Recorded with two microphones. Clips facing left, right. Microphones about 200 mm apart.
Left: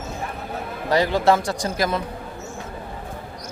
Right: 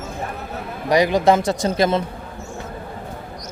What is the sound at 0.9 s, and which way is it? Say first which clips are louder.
A man's voice: right 3 dB; 15° right (ahead or behind).